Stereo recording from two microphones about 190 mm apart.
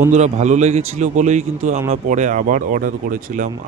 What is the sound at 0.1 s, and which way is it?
Speech, 40° right (ahead or behind).